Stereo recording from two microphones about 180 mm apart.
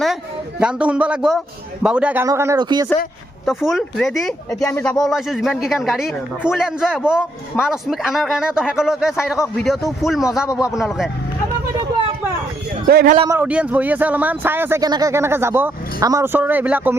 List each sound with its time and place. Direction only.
0.6 s a man's voice: 5° right (ahead or behind); by 2.8 s 25° right (ahead or behind)
3.4 s a man's voice: centre (ahead or behind)
12.9 s a man's voice: 60° right (ahead or behind)
13.2 s a man's voice: 10° right (ahead or behind)